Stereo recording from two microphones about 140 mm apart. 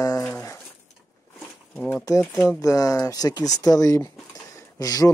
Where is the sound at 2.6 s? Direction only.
25° left (ahead or behind).